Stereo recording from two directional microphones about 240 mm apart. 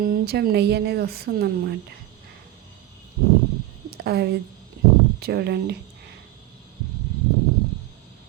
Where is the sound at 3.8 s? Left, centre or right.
Right.